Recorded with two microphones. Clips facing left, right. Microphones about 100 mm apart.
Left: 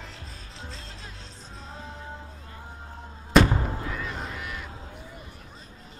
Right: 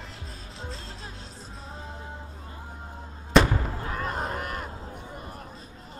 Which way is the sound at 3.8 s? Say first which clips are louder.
Right 3 dB; 45° right (ahead or behind).